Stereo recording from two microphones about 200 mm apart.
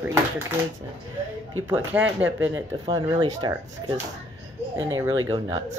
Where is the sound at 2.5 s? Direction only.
20° right (ahead or behind).